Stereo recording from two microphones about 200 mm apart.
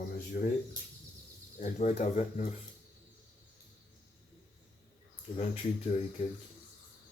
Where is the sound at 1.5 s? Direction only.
40° left (ahead or behind).